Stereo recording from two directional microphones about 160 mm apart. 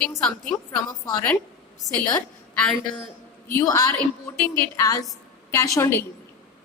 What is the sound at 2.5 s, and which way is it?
Speech, 5° left (ahead or behind).